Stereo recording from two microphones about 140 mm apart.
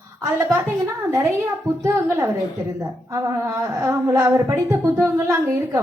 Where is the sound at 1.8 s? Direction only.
15° right (ahead or behind).